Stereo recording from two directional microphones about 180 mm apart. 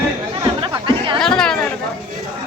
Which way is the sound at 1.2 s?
5° left (ahead or behind).